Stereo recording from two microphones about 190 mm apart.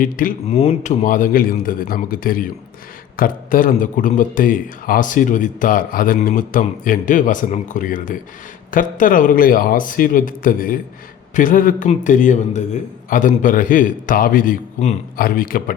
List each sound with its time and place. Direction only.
0.0 s a man's voice: 45° left (ahead or behind)
0.4 s a man's voice: 30° left (ahead or behind); by 15.7 s 50° left (ahead or behind)